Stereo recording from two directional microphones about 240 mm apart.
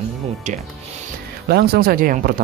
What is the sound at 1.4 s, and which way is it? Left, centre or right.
Speech, right.